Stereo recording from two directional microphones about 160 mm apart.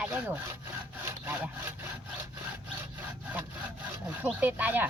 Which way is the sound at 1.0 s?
15° right (ahead or behind).